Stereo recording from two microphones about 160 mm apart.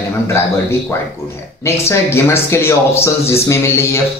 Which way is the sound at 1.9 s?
15° left (ahead or behind).